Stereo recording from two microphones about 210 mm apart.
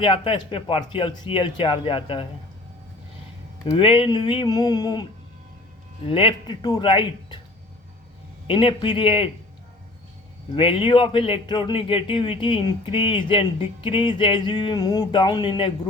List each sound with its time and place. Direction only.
0.0 s speech: 25° left (ahead or behind)
3.7 s speech: 25° left (ahead or behind)
6.1 s speech: 25° left (ahead or behind)
8.4 s speech: 25° left (ahead or behind)
10.5 s speech: 25° left (ahead or behind)